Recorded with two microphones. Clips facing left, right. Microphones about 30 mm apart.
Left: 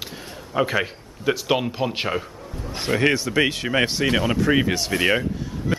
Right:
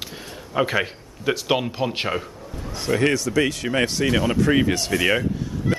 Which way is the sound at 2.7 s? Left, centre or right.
Left.